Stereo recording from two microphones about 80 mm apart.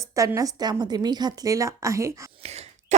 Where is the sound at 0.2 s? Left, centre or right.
Right.